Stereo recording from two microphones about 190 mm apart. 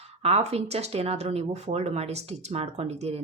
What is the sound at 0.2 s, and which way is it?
Speech, 30° right (ahead or behind).